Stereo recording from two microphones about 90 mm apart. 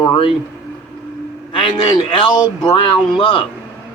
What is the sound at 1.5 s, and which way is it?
A man's voice, 75° left (ahead or behind).